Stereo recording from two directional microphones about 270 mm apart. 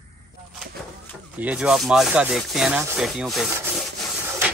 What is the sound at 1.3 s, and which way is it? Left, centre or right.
Speech, centre.